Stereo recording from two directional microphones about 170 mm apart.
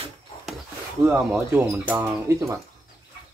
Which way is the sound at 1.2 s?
15° right (ahead or behind).